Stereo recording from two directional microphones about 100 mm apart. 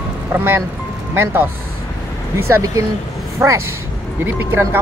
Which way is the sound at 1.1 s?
20° right (ahead or behind).